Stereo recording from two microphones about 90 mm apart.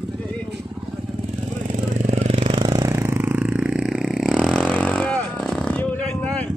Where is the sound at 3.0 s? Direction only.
25° right (ahead or behind); by 4.1 s 10° right (ahead or behind).